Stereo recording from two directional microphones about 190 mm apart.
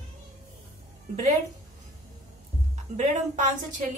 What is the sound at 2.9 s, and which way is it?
Speech, 40° right (ahead or behind).